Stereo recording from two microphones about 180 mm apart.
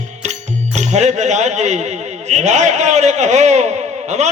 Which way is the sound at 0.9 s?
40° right (ahead or behind).